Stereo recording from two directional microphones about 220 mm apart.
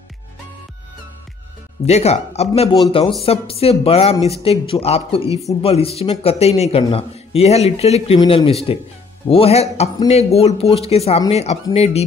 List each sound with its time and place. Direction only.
1.9 s a man's voice: 30° left (ahead or behind)